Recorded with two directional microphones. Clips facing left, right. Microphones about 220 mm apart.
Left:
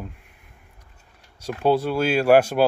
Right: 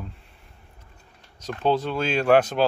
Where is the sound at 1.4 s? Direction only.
10° left (ahead or behind).